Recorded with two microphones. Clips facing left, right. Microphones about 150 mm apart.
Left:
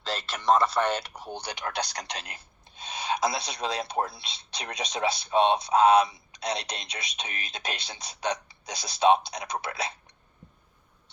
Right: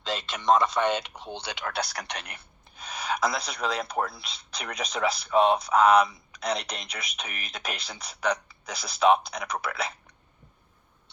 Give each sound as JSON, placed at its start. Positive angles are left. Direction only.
{"t": 0.1, "sound": "speech", "side_deg": 0}
{"t": 1.2, "sound": "speech", "side_deg": 10}
{"t": 1.6, "sound": "speech", "side_deg": 30}